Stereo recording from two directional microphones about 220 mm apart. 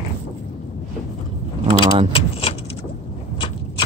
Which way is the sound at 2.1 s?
25° left (ahead or behind).